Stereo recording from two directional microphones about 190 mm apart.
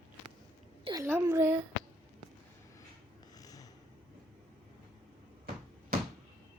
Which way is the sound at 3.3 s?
20° left (ahead or behind).